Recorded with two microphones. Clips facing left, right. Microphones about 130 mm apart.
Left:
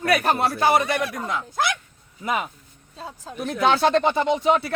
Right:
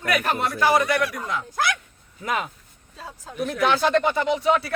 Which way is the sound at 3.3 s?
25° left (ahead or behind).